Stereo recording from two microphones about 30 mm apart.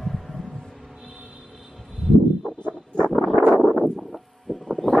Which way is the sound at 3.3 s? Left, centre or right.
Right.